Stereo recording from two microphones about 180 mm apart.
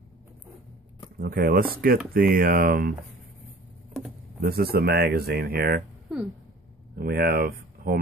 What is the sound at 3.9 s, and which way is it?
Speech, centre (ahead or behind).